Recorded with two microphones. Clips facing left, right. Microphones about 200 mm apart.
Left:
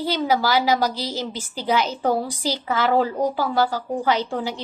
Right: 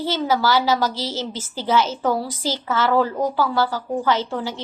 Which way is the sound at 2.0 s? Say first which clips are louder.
Even; 40° left (ahead or behind).